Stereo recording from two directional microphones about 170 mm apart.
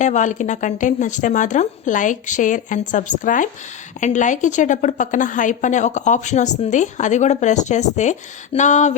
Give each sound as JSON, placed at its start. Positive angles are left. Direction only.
{"t": 0.0, "sound": "a woman's voice", "side_deg": 45}